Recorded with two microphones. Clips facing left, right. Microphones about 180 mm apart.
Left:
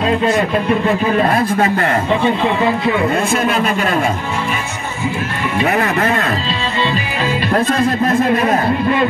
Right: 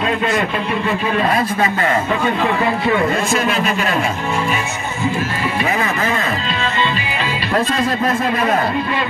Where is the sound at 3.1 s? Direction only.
60° left (ahead or behind).